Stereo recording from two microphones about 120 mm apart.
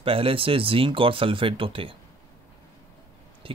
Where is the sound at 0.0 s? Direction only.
50° right (ahead or behind).